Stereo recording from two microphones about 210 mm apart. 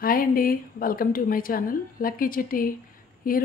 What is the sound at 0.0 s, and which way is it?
A woman's voice, 45° left (ahead or behind).